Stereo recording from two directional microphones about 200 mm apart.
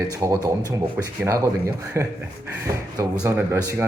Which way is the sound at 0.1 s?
15° right (ahead or behind).